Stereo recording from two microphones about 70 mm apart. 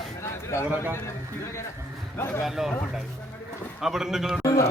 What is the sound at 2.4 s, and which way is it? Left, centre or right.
Speech, centre.